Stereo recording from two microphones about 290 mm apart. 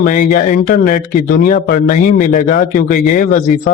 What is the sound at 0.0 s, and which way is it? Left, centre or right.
Speech, left.